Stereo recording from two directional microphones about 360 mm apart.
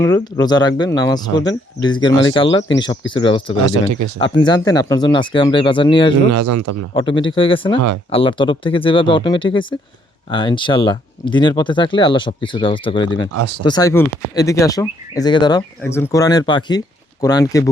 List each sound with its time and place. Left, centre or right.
0.0 s speech: centre
6.3 s a man's voice: right
6.9 s speech: centre